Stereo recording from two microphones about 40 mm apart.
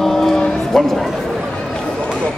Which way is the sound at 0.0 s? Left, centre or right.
Centre.